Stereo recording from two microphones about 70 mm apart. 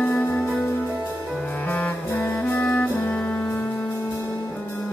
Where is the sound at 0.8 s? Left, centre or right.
Right.